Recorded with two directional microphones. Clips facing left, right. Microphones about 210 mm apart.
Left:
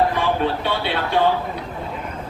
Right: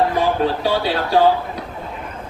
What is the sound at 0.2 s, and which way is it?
Speech, 35° right (ahead or behind).